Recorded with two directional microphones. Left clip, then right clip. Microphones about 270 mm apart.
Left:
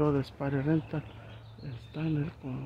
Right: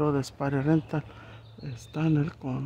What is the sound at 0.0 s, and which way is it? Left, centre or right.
Speech, centre.